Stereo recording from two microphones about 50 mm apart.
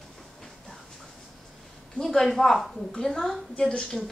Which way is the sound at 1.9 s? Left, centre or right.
Centre.